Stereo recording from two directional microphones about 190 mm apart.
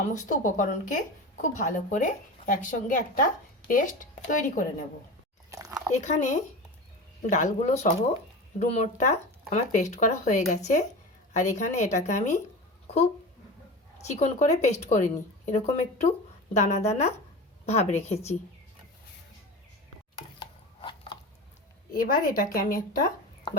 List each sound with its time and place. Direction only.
0.0 s speech: 40° left (ahead or behind)
5.5 s chewing: 15° right (ahead or behind)
5.9 s a woman's voice: 40° left (ahead or behind)
14.1 s a woman's voice: 35° left (ahead or behind)
20.4 s a sound: 25° left (ahead or behind)
21.9 s speech: 50° left (ahead or behind)